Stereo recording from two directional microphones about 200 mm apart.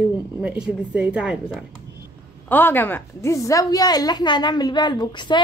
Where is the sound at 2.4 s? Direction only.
10° left (ahead or behind).